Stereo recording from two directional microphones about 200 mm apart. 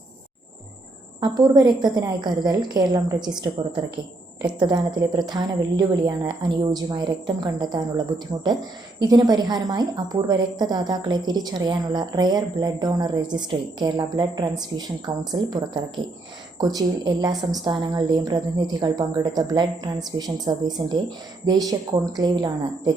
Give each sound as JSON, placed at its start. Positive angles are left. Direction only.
{"t": 1.2, "sound": "a woman's voice", "side_deg": -20}
{"t": 4.6, "sound": "a woman's voice", "side_deg": -20}